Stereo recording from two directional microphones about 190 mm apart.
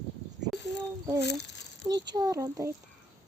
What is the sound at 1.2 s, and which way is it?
Speech, 65° left (ahead or behind).